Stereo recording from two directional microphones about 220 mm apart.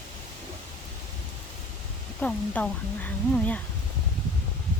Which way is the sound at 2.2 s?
5° left (ahead or behind).